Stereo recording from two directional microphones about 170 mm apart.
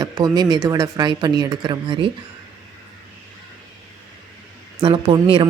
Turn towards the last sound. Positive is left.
turn(degrees=-30)  # may be behind; listen again after turning